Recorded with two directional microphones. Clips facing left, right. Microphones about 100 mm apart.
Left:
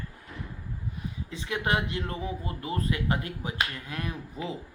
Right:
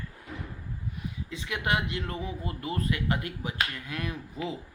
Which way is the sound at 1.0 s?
35° left (ahead or behind).